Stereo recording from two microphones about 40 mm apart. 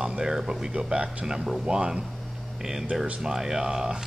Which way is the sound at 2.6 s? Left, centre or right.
Centre.